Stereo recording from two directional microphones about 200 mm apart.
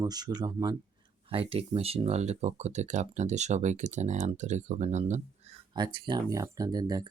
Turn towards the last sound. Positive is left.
turn(degrees=-20)  # may be behind; listen again after turning